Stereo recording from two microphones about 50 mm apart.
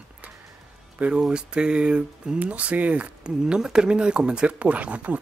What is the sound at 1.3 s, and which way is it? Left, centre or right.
Speech, centre.